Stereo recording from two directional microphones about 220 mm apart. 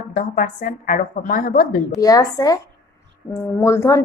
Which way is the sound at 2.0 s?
15° left (ahead or behind).